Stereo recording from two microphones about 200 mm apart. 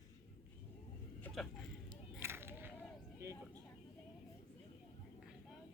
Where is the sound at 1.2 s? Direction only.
Centre (ahead or behind).